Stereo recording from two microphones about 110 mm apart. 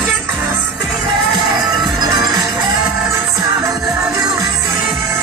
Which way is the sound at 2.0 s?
40° right (ahead or behind).